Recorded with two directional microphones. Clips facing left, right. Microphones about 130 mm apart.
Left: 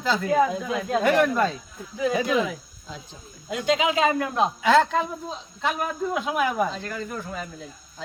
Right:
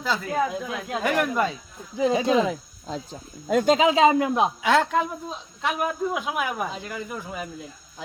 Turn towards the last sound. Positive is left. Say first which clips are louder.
# left 1 dB
turn(degrees=-10)  # may be behind; listen again after turning